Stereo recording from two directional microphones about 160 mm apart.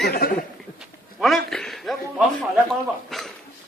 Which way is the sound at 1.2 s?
Centre (ahead or behind).